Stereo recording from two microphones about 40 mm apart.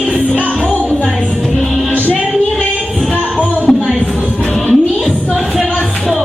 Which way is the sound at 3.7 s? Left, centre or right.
Centre.